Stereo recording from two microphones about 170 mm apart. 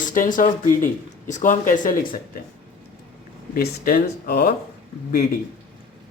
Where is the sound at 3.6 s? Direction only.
60° left (ahead or behind).